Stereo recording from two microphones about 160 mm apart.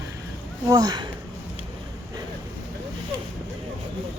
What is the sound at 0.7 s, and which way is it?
Speech, 25° right (ahead or behind).